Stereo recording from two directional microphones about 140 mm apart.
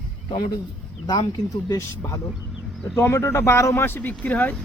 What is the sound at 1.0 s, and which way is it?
Speech, 30° left (ahead or behind).